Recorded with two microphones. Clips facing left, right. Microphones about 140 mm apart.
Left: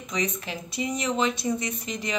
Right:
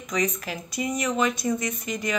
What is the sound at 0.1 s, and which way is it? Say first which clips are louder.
Speech: right 3 dB; 25° left (ahead or behind).